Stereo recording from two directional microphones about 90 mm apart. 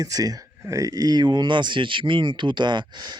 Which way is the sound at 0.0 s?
40° right (ahead or behind).